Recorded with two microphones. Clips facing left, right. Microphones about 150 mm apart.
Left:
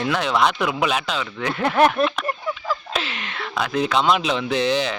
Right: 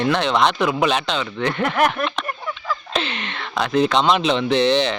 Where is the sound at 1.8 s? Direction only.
30° left (ahead or behind).